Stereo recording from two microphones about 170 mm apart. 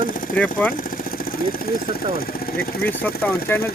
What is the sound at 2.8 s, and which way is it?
Speech, 10° left (ahead or behind).